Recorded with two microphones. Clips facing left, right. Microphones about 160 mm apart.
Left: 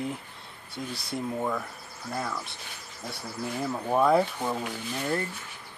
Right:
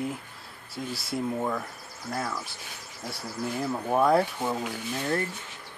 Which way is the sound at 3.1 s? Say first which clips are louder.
Right 2 dB; centre (ahead or behind).